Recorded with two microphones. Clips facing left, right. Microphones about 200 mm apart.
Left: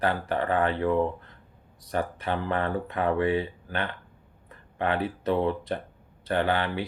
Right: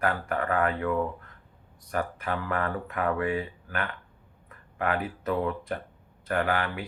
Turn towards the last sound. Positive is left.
turn(degrees=30)  # may be behind; listen again after turning